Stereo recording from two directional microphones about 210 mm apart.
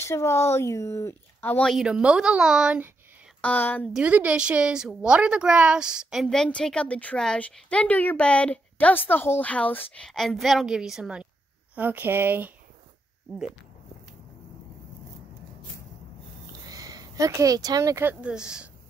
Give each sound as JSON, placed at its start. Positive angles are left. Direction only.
{"t": 0.0, "sound": "speech", "side_deg": 10}
{"t": 3.3, "sound": "a woman's voice", "side_deg": 5}
{"t": 16.6, "sound": "speech", "side_deg": -15}